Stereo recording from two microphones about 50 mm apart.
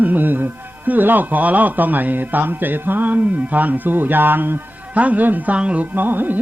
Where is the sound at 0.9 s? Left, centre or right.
Right.